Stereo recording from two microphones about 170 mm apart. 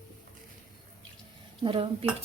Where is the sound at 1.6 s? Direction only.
30° right (ahead or behind).